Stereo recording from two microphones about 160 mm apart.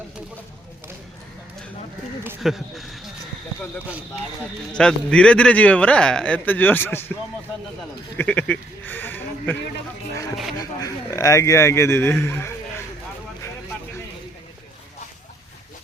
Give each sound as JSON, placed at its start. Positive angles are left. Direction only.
{"t": 2.4, "sound": "speech", "side_deg": 0}
{"t": 4.7, "sound": "speech", "side_deg": 5}
{"t": 8.2, "sound": "speech", "side_deg": 10}
{"t": 10.6, "sound": "speech", "side_deg": 20}